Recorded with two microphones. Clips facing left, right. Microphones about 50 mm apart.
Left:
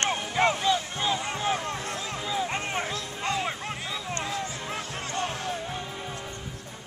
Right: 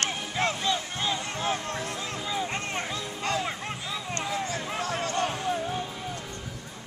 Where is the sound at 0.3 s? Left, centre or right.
Centre.